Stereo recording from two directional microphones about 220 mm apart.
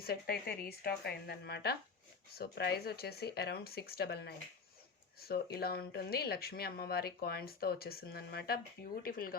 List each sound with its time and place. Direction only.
0.0 s speech: 45° left (ahead or behind)